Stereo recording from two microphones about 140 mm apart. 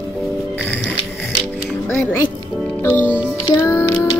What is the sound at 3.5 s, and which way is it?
Music, 15° left (ahead or behind).